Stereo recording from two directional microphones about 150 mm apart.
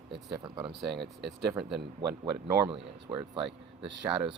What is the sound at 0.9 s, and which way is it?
Speech, 90° right.